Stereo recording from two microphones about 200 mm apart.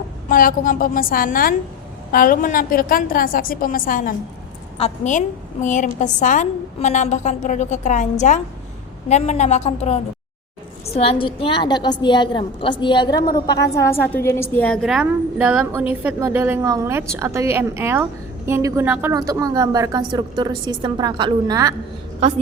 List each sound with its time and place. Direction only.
0.3 s a woman's voice: 45° left (ahead or behind); by 21.8 s 20° right (ahead or behind)